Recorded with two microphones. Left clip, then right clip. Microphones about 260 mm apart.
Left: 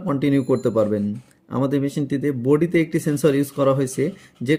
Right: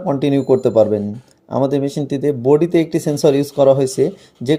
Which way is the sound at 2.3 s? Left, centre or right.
Right.